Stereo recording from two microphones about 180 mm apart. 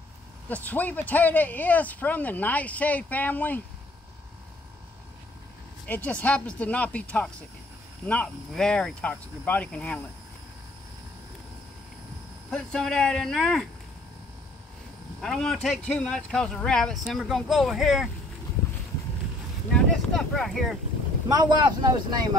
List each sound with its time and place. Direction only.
0.5 s speech: 10° left (ahead or behind)
5.9 s speech: 10° left (ahead or behind)
12.4 s speech: 5° left (ahead or behind)
15.1 s speech: 5° left (ahead or behind)
19.7 s speech: 5° left (ahead or behind)
21.3 s speech: 20° right (ahead or behind)